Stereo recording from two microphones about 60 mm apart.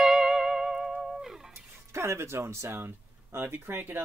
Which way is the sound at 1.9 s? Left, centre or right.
Right.